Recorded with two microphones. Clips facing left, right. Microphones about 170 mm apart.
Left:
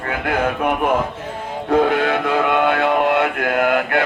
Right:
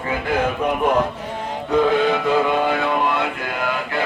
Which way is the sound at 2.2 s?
65° left (ahead or behind).